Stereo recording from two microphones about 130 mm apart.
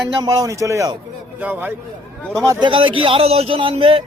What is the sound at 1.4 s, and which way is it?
Speech, 15° right (ahead or behind).